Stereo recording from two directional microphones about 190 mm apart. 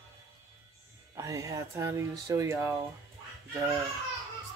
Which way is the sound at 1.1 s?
15° right (ahead or behind).